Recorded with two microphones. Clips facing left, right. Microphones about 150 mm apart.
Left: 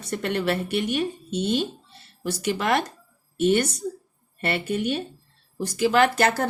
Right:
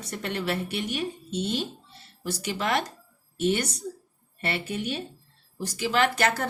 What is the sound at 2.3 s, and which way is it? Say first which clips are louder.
Speech: left 4 dB; 55° left (ahead or behind).